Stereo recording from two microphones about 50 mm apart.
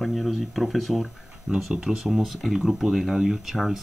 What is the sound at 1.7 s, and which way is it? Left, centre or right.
Speech, centre.